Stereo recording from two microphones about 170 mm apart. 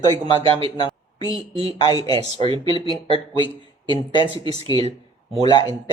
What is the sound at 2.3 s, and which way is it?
Speech, 30° right (ahead or behind).